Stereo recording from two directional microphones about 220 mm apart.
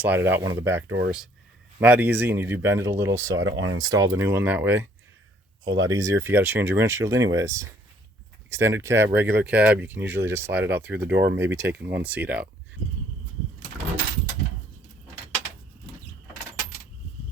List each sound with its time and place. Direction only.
0.0 s speech: 10° right (ahead or behind)
1.8 s speech: 5° right (ahead or behind)